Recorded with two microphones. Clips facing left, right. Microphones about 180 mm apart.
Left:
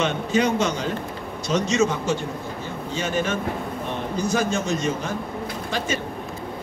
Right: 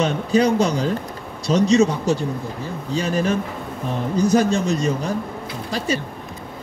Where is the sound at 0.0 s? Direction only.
35° right (ahead or behind).